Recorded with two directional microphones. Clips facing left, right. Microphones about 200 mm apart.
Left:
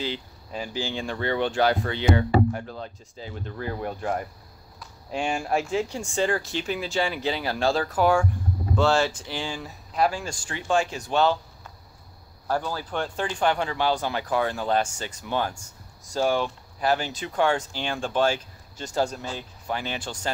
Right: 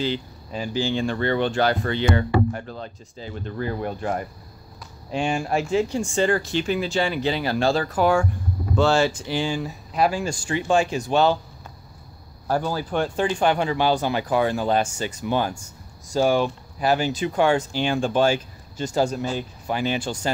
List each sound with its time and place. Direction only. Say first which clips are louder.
0.0 s speech: right 5 dB; 5° left (ahead or behind); by 11.3 s 10° right (ahead or behind)
12.4 s speech: right 4 dB; 10° right (ahead or behind)